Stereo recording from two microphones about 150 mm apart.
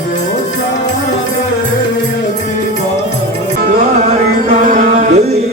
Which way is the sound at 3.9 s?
50° right (ahead or behind).